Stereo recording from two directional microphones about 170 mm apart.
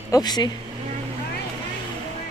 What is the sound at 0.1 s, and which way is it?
Speech, 25° left (ahead or behind).